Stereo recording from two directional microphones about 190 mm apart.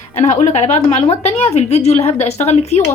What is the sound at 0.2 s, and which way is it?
A woman's voice, 35° left (ahead or behind).